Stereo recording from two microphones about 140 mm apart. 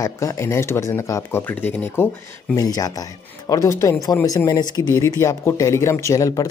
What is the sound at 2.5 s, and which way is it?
Speech, 25° left (ahead or behind).